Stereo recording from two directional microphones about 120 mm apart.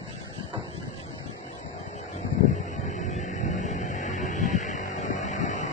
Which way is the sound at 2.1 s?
75° left (ahead or behind).